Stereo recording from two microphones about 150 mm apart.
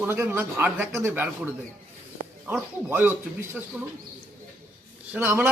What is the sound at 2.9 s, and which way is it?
Speech, 15° right (ahead or behind).